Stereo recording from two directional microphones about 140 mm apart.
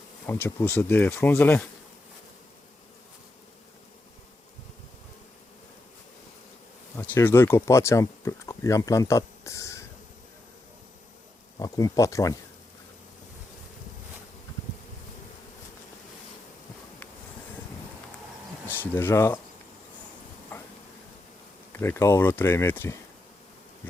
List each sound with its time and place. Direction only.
0.3 s speech: 15° left (ahead or behind)
6.9 s speech: 15° left (ahead or behind)
11.6 s speech: 25° left (ahead or behind)
18.7 s speech: 15° left (ahead or behind)
20.5 s a sound: 15° left (ahead or behind)
21.7 s speech: 15° left (ahead or behind)